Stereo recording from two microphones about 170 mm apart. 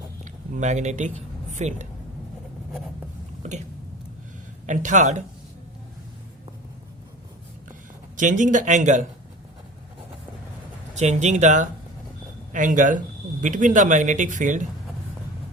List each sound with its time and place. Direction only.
0.5 s a man's voice: 45° right (ahead or behind)
4.6 s speech: 45° right (ahead or behind)
8.1 s speech: 50° right (ahead or behind)
10.9 s speech: 40° right (ahead or behind)